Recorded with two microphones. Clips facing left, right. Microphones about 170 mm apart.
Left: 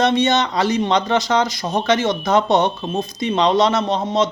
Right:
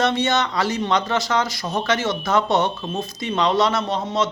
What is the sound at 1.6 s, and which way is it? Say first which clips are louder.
Speech: left 3 dB; 40° left (ahead or behind).